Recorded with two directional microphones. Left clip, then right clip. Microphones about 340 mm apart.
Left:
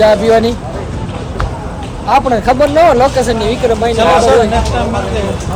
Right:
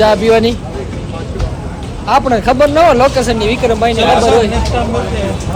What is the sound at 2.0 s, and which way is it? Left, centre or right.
Speech, centre.